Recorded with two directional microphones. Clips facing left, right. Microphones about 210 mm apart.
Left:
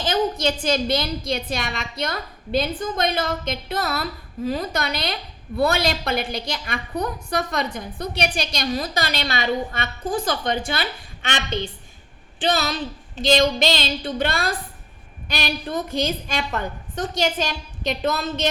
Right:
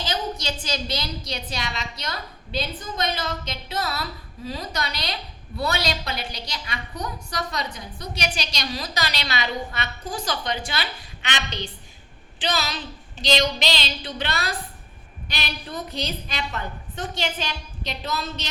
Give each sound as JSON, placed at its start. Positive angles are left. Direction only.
{"t": 0.0, "sound": "a woman's voice", "side_deg": 50}